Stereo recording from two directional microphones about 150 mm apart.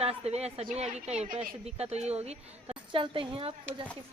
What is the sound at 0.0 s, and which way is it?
A woman's voice, 45° right (ahead or behind).